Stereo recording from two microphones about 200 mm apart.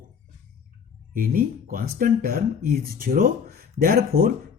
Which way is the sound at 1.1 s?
45° right (ahead or behind).